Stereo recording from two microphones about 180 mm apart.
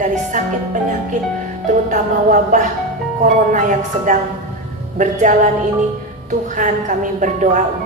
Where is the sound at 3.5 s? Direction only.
45° right (ahead or behind).